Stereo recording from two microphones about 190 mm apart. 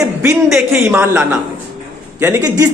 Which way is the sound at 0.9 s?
10° right (ahead or behind).